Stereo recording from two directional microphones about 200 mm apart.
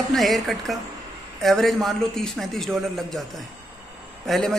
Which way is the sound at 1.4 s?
Centre (ahead or behind).